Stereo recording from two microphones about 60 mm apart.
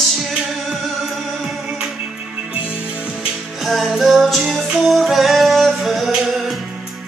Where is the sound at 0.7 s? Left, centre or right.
Centre.